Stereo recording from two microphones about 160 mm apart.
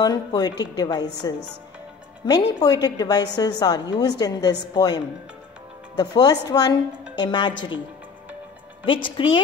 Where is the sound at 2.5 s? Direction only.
25° left (ahead or behind).